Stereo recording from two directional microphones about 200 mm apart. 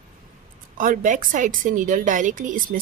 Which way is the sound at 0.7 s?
40° right (ahead or behind).